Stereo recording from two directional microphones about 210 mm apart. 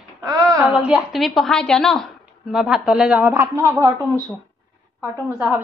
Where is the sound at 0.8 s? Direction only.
5° right (ahead or behind).